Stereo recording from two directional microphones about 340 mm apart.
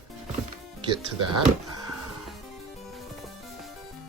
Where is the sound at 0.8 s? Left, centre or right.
Centre.